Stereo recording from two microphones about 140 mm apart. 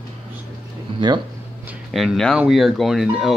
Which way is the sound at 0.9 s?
35° right (ahead or behind).